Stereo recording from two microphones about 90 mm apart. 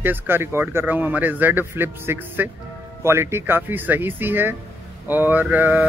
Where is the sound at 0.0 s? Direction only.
25° right (ahead or behind).